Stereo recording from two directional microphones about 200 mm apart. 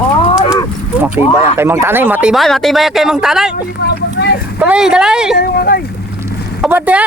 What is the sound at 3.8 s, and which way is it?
Vehicle, 55° left (ahead or behind).